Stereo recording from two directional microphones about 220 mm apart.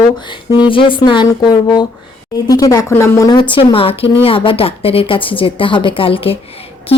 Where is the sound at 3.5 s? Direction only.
25° left (ahead or behind).